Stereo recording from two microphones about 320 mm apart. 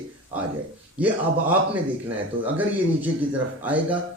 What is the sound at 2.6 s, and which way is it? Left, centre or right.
A man's voice, centre.